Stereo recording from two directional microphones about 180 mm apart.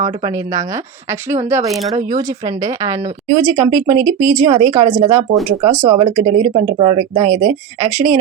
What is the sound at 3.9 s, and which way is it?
Speech, 45° right (ahead or behind).